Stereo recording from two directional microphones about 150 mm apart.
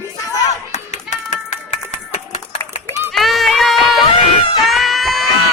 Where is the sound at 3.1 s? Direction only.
Centre (ahead or behind).